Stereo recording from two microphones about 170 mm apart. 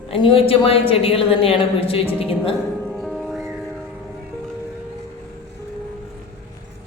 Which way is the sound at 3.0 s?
Centre (ahead or behind).